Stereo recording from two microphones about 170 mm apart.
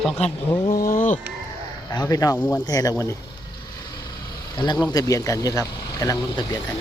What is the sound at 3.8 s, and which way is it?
Vehicle, 25° left (ahead or behind).